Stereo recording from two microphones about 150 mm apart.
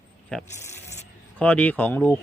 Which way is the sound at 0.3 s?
5° left (ahead or behind).